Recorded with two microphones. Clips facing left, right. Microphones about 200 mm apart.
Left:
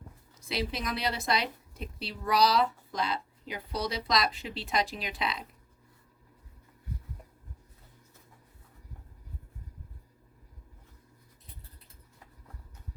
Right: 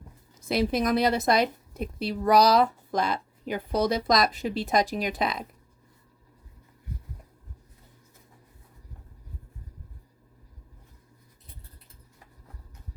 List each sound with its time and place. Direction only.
0.4 s a woman's voice: 45° right (ahead or behind)